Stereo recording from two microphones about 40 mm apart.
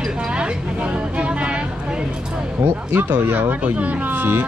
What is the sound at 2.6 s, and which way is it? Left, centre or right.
Speech, right.